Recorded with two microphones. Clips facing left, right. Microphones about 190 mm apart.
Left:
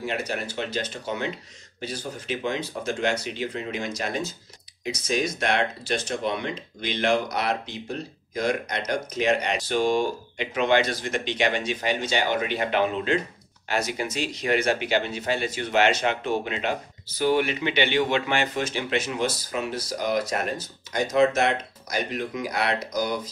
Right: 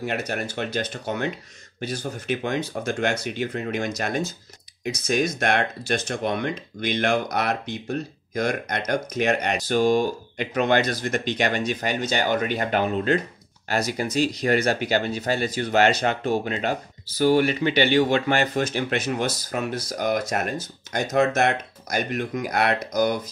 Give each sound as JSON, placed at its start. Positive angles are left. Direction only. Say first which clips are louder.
{"t": 0.0, "sound": "speech", "louder": "right 2 dB", "side_deg": -50}